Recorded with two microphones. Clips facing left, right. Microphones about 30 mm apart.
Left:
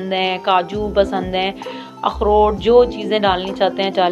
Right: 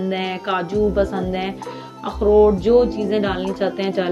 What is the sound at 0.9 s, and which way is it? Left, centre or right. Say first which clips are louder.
Speech: left 4 dB; left.